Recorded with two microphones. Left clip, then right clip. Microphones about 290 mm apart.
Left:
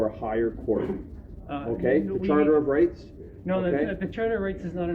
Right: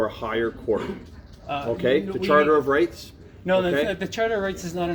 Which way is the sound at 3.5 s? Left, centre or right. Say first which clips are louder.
Right 5 dB; right.